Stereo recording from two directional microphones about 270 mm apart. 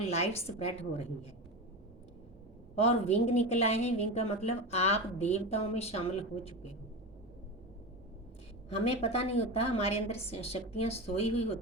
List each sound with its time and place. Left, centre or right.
0.0 s a woman's voice: left
3.2 s a woman's voice: left
8.8 s a woman's voice: left